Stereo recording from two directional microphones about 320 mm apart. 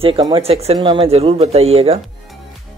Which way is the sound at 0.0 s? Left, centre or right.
Centre.